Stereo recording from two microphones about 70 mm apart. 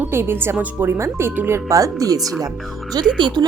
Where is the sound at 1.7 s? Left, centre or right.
Right.